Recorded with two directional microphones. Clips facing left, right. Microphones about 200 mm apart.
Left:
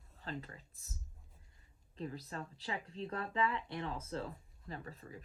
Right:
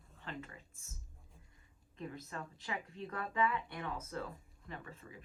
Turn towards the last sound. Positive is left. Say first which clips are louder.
# left 2 dB
turn(degrees=40)  # may be behind; listen again after turning